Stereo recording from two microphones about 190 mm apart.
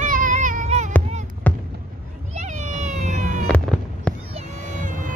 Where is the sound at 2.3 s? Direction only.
40° right (ahead or behind).